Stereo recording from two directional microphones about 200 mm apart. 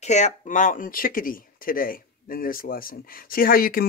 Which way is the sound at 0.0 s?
35° left (ahead or behind).